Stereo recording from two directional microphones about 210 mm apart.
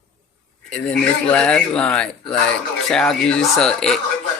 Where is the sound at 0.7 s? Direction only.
5° left (ahead or behind).